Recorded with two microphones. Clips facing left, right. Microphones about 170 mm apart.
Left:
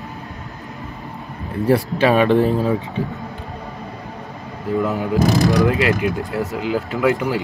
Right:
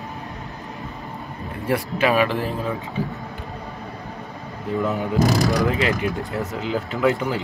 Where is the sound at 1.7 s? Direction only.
30° left (ahead or behind).